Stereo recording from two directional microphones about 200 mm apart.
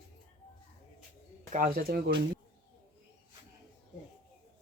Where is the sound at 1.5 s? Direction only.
45° right (ahead or behind).